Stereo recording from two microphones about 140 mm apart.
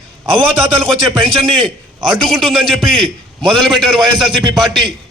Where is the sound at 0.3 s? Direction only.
40° right (ahead or behind).